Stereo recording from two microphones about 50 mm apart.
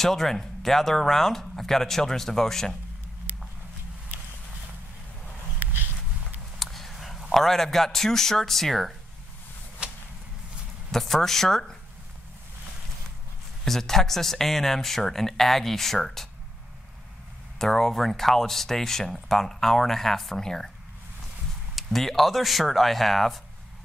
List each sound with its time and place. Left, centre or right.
0.0 s speech: centre
6.6 s a man's voice: centre
9.8 s whip: right
10.9 s speech: centre
13.7 s speech: centre
17.6 s speech: centre
21.7 s speech: centre